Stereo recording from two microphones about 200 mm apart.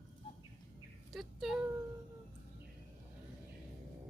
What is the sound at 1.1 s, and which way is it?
Speech, centre (ahead or behind).